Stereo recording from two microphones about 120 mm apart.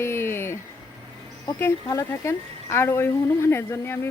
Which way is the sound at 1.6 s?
25° left (ahead or behind).